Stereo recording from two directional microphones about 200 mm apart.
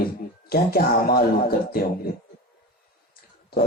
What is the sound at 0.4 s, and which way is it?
A man's voice, 50° left (ahead or behind).